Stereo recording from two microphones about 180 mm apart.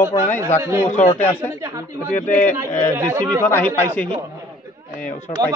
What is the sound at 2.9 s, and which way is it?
Speech, 15° right (ahead or behind).